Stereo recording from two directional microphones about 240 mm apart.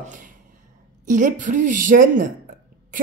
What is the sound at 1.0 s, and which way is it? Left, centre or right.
Speech, right.